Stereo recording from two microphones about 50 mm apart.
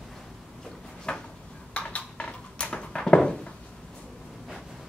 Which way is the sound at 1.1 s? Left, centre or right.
Centre.